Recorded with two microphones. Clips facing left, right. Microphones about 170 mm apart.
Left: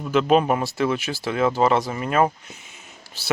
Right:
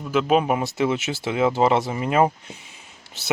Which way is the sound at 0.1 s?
5° right (ahead or behind).